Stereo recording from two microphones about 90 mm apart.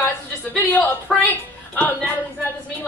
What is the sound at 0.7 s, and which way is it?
A woman's voice, 20° left (ahead or behind).